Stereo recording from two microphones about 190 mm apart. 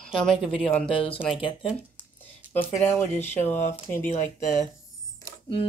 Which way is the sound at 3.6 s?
35° left (ahead or behind).